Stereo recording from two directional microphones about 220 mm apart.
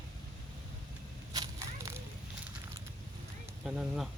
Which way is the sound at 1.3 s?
15° right (ahead or behind).